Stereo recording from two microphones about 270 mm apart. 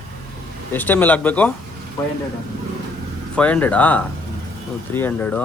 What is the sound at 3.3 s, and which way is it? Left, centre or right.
Speech, centre.